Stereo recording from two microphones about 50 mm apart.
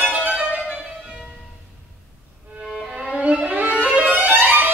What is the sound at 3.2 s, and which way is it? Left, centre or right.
Music, right.